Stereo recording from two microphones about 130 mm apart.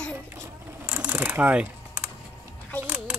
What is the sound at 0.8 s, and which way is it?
Computer keyboard, 15° right (ahead or behind).